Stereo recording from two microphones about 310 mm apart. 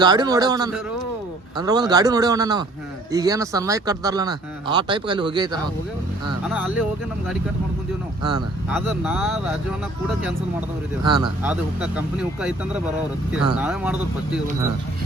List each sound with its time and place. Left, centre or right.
0.0 s speech: centre
8.3 s speech: centre
11.0 s speech: centre